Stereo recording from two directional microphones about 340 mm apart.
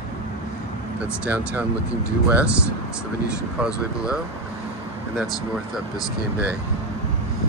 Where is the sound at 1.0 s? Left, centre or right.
Centre.